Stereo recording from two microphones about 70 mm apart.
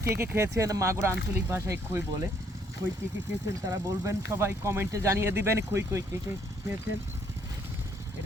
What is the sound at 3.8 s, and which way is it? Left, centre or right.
Speech, right.